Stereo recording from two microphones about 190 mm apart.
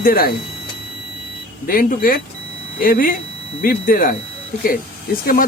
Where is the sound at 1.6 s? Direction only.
45° left (ahead or behind).